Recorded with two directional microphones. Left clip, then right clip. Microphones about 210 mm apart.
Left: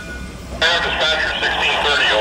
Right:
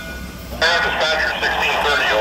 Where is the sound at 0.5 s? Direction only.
Centre (ahead or behind).